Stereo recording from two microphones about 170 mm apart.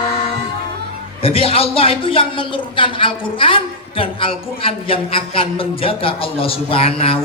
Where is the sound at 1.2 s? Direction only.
35° left (ahead or behind).